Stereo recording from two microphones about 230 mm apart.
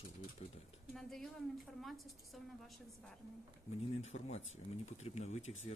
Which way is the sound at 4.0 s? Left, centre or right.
Left.